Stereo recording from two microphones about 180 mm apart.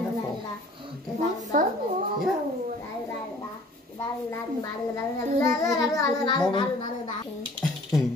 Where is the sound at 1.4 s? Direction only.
45° right (ahead or behind).